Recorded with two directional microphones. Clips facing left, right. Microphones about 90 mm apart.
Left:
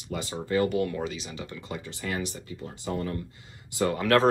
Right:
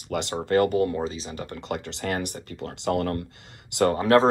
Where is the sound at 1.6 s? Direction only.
70° right (ahead or behind).